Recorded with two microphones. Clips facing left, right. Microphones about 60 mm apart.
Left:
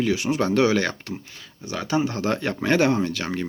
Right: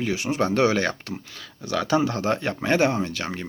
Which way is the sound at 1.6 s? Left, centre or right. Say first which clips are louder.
Right 2 dB; right.